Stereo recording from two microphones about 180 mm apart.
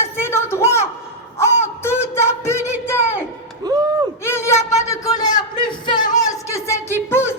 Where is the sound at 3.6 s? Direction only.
20° right (ahead or behind).